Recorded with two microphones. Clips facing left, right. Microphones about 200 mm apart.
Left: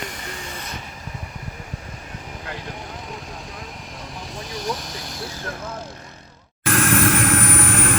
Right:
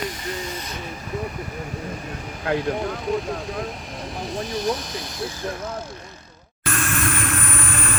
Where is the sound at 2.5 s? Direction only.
65° right (ahead or behind).